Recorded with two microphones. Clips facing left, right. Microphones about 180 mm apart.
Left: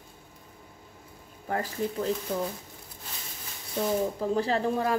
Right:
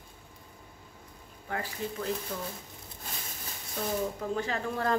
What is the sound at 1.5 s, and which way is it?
Speech, 35° left (ahead or behind).